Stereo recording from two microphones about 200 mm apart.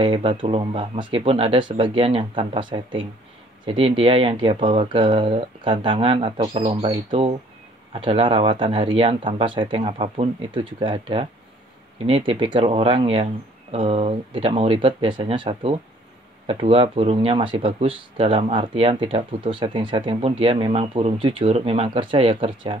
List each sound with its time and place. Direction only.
0.0 s speech: 25° right (ahead or behind)